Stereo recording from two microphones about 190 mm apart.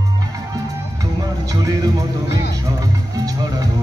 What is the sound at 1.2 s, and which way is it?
Music, 20° right (ahead or behind).